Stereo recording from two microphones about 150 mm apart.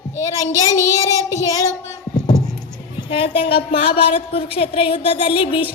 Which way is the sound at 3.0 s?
35° left (ahead or behind).